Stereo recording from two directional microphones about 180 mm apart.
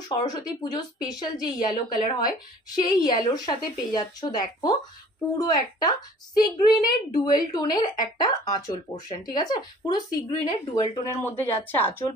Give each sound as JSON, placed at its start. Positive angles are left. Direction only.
{"t": 0.2, "sound": "speech", "side_deg": 20}